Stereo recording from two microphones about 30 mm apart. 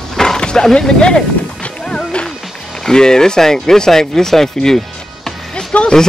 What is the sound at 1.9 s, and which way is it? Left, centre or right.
Music, left.